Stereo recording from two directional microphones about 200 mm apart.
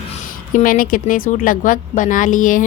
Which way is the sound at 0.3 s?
45° left (ahead or behind).